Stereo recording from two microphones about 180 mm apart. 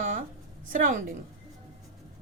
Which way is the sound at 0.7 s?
50° right (ahead or behind).